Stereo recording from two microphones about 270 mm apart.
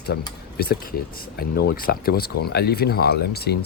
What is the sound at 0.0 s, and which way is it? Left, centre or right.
A man's voice, left.